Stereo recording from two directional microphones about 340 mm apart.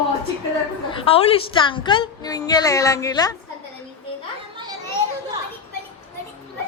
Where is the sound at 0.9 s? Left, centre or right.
Centre.